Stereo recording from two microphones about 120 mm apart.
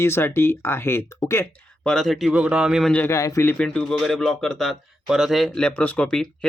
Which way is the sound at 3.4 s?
10° left (ahead or behind).